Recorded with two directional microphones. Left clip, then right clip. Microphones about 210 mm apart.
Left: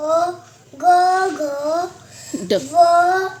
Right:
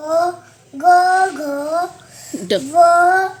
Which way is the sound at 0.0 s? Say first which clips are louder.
Right 1 dB; 25° left (ahead or behind).